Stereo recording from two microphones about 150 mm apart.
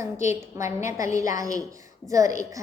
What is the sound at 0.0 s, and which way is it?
A woman's voice, 15° right (ahead or behind).